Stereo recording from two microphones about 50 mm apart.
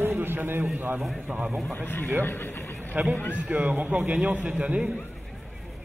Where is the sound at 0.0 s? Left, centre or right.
Right.